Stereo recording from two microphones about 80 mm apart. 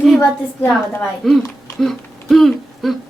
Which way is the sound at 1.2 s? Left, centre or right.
Centre.